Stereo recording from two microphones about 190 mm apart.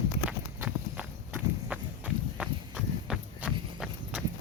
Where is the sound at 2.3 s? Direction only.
5° right (ahead or behind).